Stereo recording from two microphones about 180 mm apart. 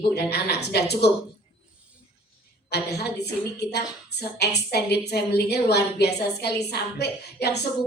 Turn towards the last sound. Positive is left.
turn(degrees=65)  # may be behind; listen again after turning